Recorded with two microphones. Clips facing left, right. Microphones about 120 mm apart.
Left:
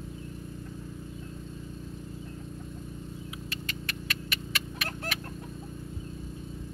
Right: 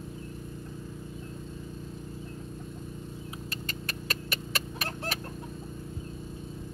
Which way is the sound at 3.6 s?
40° right (ahead or behind).